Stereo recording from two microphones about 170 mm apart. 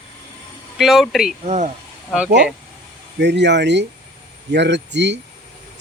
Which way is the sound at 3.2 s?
85° right.